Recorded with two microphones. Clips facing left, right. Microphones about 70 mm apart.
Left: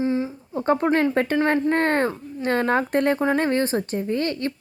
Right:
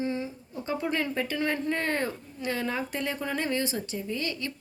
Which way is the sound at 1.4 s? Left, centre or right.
Left.